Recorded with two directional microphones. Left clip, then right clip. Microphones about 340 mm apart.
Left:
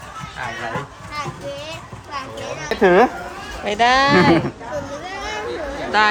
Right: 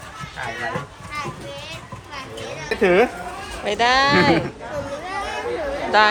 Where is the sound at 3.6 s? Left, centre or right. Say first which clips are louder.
Left 2 dB; centre.